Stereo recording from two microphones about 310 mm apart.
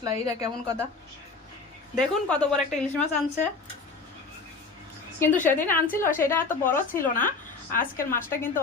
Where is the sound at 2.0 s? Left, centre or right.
Centre.